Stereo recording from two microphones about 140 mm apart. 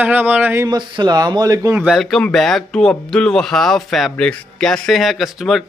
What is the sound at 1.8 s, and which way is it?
Speech, centre (ahead or behind).